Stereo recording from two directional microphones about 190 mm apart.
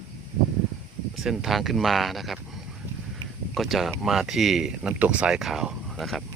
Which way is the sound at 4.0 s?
Centre (ahead or behind).